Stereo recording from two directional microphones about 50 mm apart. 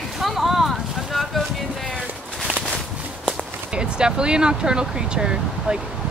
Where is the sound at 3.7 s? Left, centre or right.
Centre.